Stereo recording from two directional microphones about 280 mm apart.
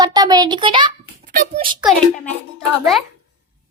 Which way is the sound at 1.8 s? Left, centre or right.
Centre.